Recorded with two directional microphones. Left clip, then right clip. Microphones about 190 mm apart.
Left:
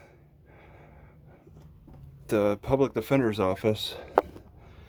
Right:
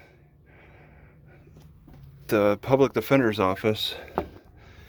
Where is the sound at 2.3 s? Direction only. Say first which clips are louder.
Right 4 dB; 5° left (ahead or behind).